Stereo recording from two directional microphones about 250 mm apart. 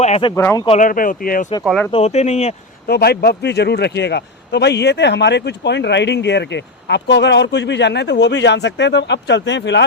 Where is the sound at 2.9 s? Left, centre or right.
Left.